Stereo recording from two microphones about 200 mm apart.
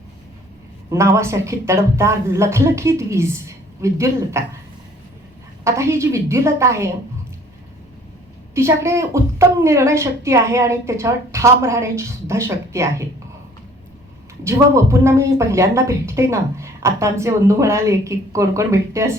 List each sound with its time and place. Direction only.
0.9 s speech: 15° right (ahead or behind)
5.6 s speech: 15° right (ahead or behind)
8.5 s speech: 15° right (ahead or behind)
14.4 s speech: 15° right (ahead or behind)